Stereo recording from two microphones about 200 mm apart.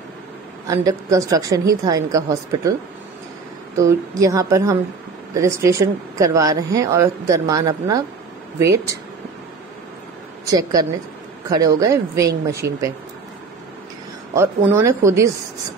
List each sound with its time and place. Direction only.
0.7 s speech: 15° right (ahead or behind)
10.4 s speech: 15° right (ahead or behind)
14.3 s speech: 15° right (ahead or behind)